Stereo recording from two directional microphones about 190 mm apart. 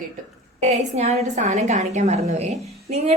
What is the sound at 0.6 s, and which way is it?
A woman's voice, 35° right (ahead or behind).